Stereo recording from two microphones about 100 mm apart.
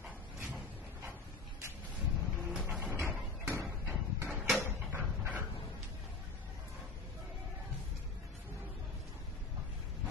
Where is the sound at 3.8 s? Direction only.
15° right (ahead or behind).